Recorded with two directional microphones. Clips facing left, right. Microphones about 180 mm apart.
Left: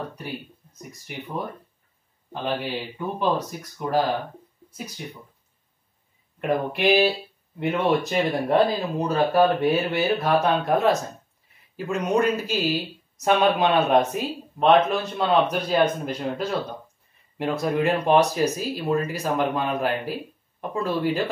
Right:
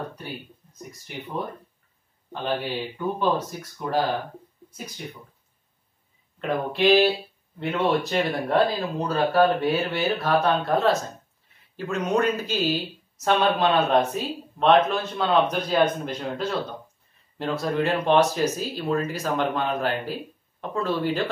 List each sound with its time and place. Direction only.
2.4 s speech: 10° left (ahead or behind)
6.4 s speech: 10° left (ahead or behind)